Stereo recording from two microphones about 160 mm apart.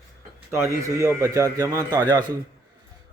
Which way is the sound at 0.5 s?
20° right (ahead or behind).